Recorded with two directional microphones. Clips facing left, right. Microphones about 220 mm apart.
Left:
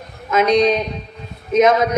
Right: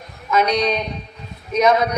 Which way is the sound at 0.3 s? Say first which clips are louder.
Left 4 dB; 25° left (ahead or behind).